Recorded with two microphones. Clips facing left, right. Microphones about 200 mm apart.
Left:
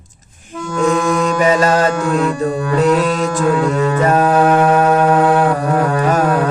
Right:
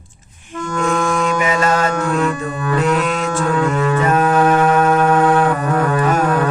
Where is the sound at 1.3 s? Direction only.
40° left (ahead or behind).